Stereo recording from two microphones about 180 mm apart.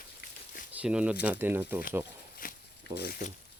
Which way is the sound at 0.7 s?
5° right (ahead or behind).